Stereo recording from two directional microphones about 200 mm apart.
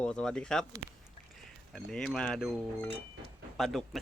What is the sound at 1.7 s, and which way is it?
Speech, 5° left (ahead or behind).